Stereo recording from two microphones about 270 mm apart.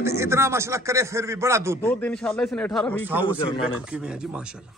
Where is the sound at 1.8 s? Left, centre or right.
Centre.